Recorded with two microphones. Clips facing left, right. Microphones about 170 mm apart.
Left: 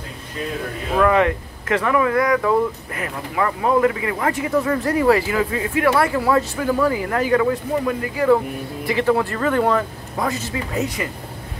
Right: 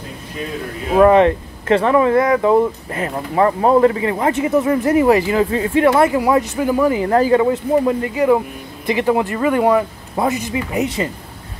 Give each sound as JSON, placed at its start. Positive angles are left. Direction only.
{"t": 0.9, "sound": "speech", "side_deg": -30}
{"t": 5.9, "sound": "speech", "side_deg": -20}
{"t": 7.1, "sound": "speech", "side_deg": -30}